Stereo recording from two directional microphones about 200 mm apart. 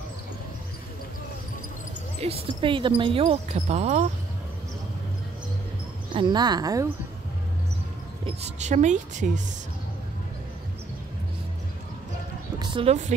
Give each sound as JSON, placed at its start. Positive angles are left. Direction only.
{"t": 2.1, "sound": "speech", "side_deg": -30}
{"t": 6.1, "sound": "speech", "side_deg": -20}
{"t": 8.3, "sound": "speech", "side_deg": -35}
{"t": 12.5, "sound": "speech", "side_deg": -30}